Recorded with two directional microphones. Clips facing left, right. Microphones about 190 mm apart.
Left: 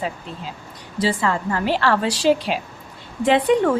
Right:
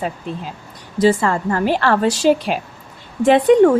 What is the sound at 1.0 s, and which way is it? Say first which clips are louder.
A woman's voice: right 6 dB; 45° right (ahead or behind).